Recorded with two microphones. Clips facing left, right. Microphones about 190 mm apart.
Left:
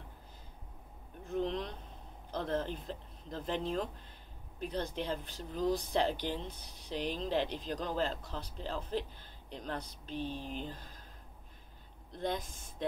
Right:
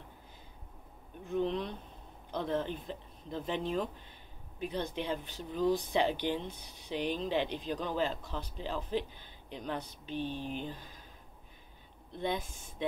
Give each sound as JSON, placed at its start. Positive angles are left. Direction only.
{"t": 1.2, "sound": "a sound", "side_deg": 0}
{"t": 2.3, "sound": "speech", "side_deg": 0}
{"t": 10.1, "sound": "speech", "side_deg": 35}
{"t": 10.6, "sound": "speech", "side_deg": 0}
{"t": 12.3, "sound": "speech", "side_deg": 0}